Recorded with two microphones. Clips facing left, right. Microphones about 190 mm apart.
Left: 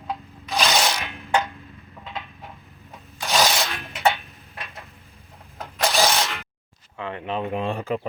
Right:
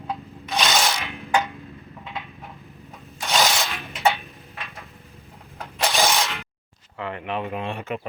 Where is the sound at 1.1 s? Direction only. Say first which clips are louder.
Right 1 dB; centre (ahead or behind).